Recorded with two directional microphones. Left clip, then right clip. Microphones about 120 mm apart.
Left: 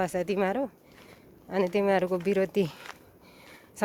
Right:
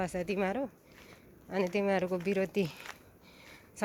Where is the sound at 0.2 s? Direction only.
40° left (ahead or behind); by 2.5 s 55° left (ahead or behind).